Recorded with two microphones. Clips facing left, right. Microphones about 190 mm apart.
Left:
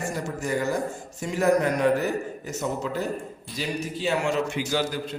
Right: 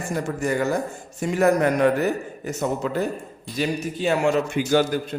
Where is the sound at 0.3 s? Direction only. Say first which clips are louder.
Right 3 dB; 60° right (ahead or behind).